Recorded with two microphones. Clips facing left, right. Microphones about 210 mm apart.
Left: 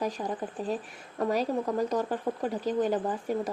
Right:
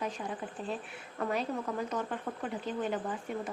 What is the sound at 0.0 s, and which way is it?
Speech, 40° left (ahead or behind).